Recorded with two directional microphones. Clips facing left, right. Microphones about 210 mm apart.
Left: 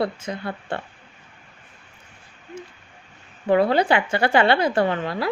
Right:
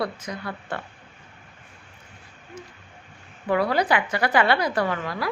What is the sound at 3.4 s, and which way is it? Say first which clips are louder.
Speech: left 4 dB; 25° left (ahead or behind).